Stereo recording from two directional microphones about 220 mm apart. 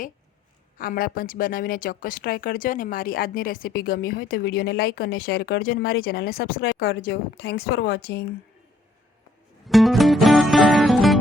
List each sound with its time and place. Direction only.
0.8 s speech: 40° left (ahead or behind)
9.6 s music: centre (ahead or behind)